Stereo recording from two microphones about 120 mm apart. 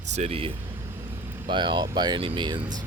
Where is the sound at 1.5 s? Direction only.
40° right (ahead or behind).